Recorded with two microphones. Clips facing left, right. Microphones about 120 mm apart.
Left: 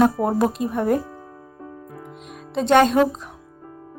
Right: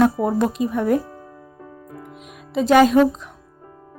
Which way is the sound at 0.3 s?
Centre (ahead or behind).